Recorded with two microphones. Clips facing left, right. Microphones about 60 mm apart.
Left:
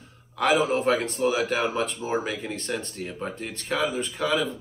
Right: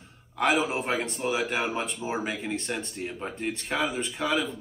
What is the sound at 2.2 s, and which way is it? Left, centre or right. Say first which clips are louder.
Speech: even; centre.